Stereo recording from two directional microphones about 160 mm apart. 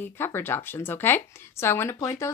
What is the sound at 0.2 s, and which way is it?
Speech, 15° left (ahead or behind).